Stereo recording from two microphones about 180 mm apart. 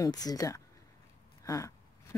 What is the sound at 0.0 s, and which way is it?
Speech, 20° left (ahead or behind).